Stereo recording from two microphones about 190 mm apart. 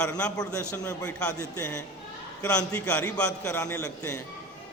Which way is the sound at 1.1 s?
5° left (ahead or behind).